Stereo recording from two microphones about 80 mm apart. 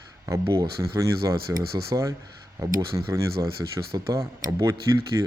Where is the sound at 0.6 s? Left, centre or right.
Right.